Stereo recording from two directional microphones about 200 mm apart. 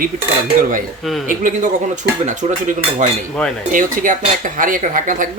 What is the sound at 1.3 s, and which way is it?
Speech, 40° right (ahead or behind).